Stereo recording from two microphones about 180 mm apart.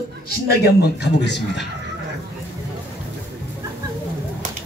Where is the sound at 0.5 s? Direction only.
65° left (ahead or behind).